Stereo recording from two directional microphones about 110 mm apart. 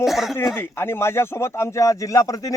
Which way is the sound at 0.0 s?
Centre (ahead or behind).